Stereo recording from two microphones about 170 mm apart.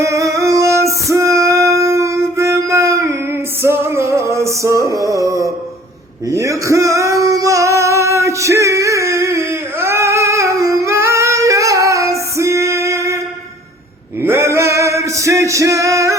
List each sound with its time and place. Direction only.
0.0 s music: 20° right (ahead or behind)
6.3 s singing: 20° right (ahead or behind)
14.2 s male singing: 15° right (ahead or behind)